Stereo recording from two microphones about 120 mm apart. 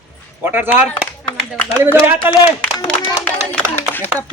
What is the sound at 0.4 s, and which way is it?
Speech, 20° right (ahead or behind).